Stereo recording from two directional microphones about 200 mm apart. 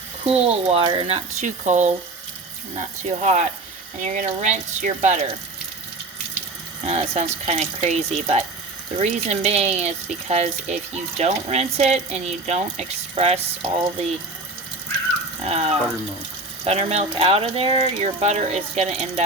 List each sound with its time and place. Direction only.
0.3 s speech: 30° right (ahead or behind)
6.8 s speech: 35° right (ahead or behind)
15.4 s speech: 30° right (ahead or behind)